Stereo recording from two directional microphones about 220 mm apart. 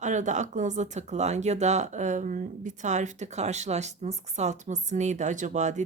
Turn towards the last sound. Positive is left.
turn(degrees=-35)  # may be behind; listen again after turning